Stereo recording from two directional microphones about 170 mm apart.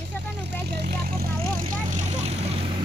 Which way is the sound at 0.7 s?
65° right (ahead or behind).